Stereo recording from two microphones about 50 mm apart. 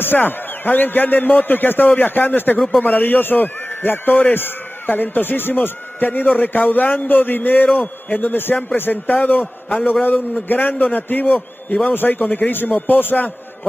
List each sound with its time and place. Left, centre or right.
0.0 s a man's voice: left
11.9 s a man's voice: left